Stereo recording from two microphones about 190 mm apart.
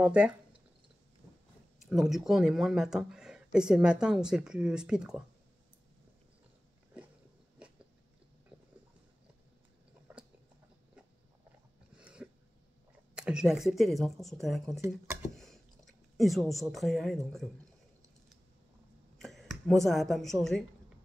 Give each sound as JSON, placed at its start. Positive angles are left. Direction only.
{"t": 0.0, "sound": "speech", "side_deg": -5}
{"t": 1.9, "sound": "speech", "side_deg": 0}
{"t": 8.5, "sound": "a sound", "side_deg": -5}
{"t": 12.0, "sound": "a sound", "side_deg": -5}
{"t": 13.1, "sound": "speech", "side_deg": -5}
{"t": 19.1, "sound": "speech", "side_deg": 0}